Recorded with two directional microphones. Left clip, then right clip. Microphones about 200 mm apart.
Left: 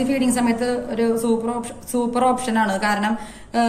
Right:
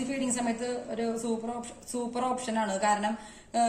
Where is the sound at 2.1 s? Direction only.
45° right (ahead or behind).